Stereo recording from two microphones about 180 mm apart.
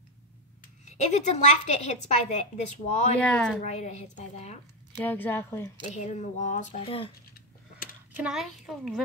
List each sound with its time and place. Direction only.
0.8 s a woman's voice: 40° left (ahead or behind)
3.2 s speech: 5° left (ahead or behind)
3.6 s a woman's voice: 40° left (ahead or behind)
4.9 s speech: 10° left (ahead or behind)
5.9 s a woman's voice: 40° left (ahead or behind)
8.2 s a child's voice: 5° right (ahead or behind)